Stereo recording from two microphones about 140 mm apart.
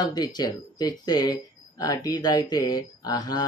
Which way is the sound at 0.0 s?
30° left (ahead or behind).